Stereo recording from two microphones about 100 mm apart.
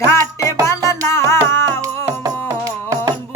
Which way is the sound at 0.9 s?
25° left (ahead or behind).